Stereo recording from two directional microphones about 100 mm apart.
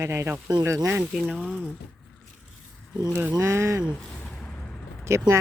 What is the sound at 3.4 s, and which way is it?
Speech, 25° right (ahead or behind).